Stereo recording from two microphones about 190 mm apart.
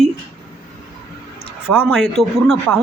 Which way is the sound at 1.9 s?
Centre (ahead or behind).